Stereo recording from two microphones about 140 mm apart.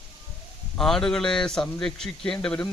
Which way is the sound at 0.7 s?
5° left (ahead or behind).